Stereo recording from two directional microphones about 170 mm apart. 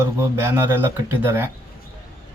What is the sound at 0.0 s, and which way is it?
Speech, 15° right (ahead or behind).